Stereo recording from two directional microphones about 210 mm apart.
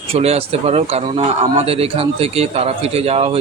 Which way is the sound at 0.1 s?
30° right (ahead or behind).